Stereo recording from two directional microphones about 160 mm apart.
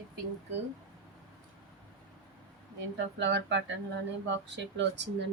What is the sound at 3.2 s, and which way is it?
A woman's voice, 90° right.